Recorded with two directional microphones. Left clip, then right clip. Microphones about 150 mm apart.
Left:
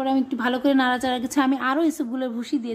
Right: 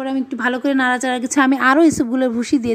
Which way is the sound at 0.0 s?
20° right (ahead or behind).